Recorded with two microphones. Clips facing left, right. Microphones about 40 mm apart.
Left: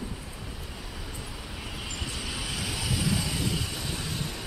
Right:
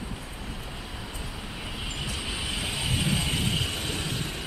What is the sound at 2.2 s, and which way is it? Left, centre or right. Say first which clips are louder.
Vehicle: right 2 dB; right.